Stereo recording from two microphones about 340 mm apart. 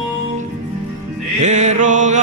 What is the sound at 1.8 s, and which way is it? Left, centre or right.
Chant, right.